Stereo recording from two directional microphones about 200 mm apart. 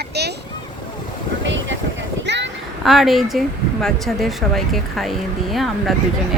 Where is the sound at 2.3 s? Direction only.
60° right (ahead or behind).